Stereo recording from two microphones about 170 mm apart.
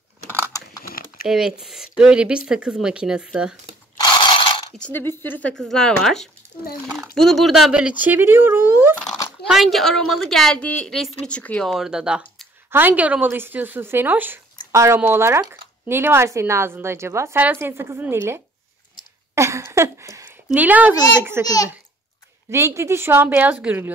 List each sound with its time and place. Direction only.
0.8 s typing: 60° left (ahead or behind)
1.2 s a woman's voice: 5° right (ahead or behind)
3.9 s mechanisms: 25° left (ahead or behind)
4.8 s a woman's voice: 15° left (ahead or behind); by 8.9 s 15° right (ahead or behind)
9.5 s a woman's voice: centre (ahead or behind)
19.3 s a sound: 15° right (ahead or behind)
20.5 s speech: 10° right (ahead or behind)
22.5 s speech: 15° right (ahead or behind)